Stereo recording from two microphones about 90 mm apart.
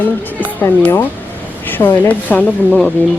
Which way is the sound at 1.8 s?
20° left (ahead or behind).